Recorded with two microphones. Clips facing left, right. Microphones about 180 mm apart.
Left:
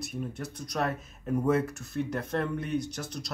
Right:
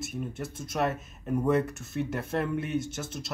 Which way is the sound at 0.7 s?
5° right (ahead or behind).